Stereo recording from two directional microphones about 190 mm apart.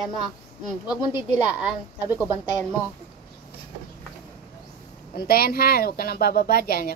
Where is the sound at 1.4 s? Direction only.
25° left (ahead or behind).